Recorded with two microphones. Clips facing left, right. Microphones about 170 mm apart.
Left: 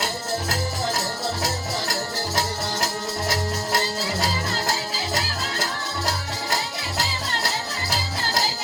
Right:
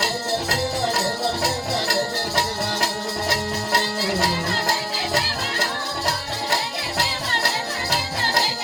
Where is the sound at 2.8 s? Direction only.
65° right (ahead or behind).